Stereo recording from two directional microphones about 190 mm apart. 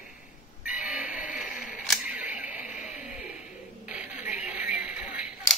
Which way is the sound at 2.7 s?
40° left (ahead or behind).